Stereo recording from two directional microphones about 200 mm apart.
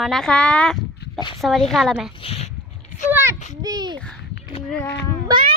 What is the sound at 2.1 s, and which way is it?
Speech, 30° left (ahead or behind).